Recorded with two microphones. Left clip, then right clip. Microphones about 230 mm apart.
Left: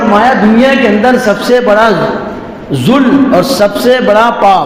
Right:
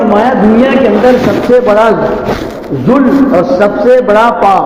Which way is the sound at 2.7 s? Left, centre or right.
Left.